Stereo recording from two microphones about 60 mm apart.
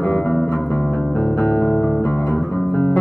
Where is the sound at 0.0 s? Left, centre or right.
Left.